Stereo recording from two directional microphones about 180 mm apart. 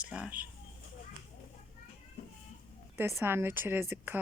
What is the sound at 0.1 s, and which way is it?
Speech, 5° right (ahead or behind).